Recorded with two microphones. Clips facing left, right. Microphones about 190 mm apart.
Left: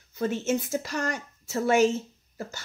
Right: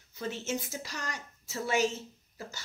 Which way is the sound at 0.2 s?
50° left (ahead or behind).